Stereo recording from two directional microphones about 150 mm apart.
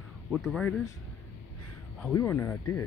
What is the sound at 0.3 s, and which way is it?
Speech, 5° right (ahead or behind).